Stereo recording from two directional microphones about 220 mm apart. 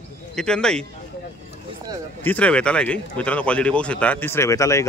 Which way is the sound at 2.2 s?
5° left (ahead or behind).